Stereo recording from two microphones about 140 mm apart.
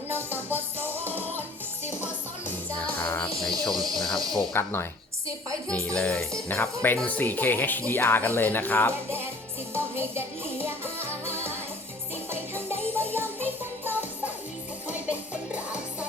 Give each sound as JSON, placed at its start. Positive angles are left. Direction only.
{"t": 0.1, "sound": "music", "side_deg": -15}
{"t": 2.8, "sound": "music", "side_deg": 10}
{"t": 3.6, "sound": "speech", "side_deg": 0}
{"t": 4.5, "sound": "speech", "side_deg": 15}
{"t": 9.7, "sound": "music", "side_deg": -15}